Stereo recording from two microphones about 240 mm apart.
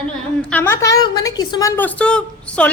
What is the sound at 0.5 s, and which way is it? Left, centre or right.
A woman's voice, centre.